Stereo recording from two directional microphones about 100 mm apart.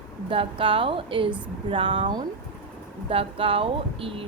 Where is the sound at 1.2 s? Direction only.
15° right (ahead or behind).